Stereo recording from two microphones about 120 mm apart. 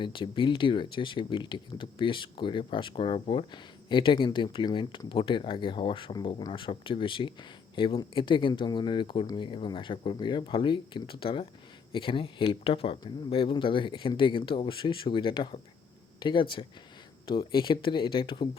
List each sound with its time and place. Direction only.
0.0 s speech: 45° left (ahead or behind)